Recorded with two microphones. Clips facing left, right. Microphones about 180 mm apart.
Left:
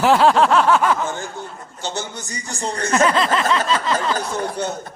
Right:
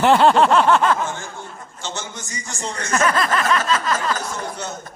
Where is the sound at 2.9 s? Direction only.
25° left (ahead or behind).